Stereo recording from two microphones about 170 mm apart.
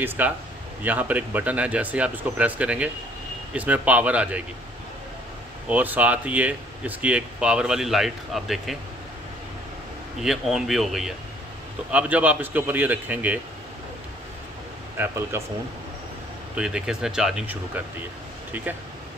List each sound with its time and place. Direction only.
0.2 s speech: 10° right (ahead or behind)
5.7 s speech: 10° right (ahead or behind)
10.2 s speech: centre (ahead or behind)
15.0 s speech: 15° right (ahead or behind)
16.5 s speech: 5° right (ahead or behind)